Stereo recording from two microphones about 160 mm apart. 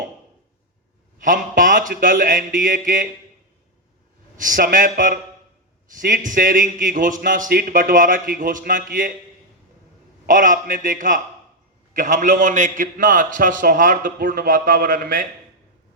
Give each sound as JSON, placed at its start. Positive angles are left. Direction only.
{"t": 1.2, "sound": "a man's voice", "side_deg": -55}
{"t": 4.4, "sound": "a man's voice", "side_deg": -55}
{"t": 10.2, "sound": "a man's voice", "side_deg": -55}